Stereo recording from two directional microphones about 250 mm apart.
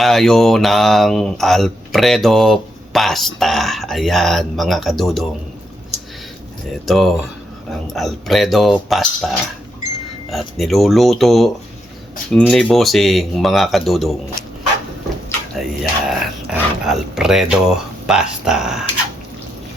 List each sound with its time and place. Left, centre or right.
0.0 s speech: centre
6.8 s speech: centre
10.3 s speech: centre
15.3 s speech: centre